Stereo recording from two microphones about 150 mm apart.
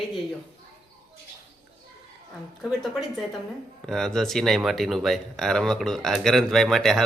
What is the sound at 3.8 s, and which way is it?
Speech, 5° left (ahead or behind).